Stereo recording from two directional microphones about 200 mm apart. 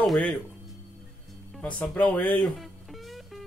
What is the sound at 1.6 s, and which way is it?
Speech, 5° left (ahead or behind).